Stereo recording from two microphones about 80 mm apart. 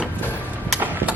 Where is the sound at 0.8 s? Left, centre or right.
Right.